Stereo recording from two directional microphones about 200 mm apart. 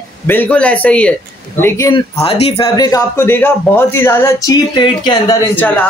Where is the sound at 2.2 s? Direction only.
30° left (ahead or behind).